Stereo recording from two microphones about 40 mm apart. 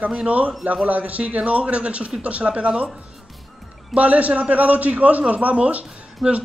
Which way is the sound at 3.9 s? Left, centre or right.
Right.